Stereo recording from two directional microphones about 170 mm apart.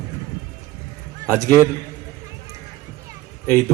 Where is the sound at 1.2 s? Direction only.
20° right (ahead or behind).